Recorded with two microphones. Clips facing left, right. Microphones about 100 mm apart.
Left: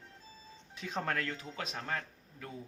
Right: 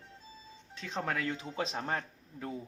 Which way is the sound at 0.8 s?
5° left (ahead or behind).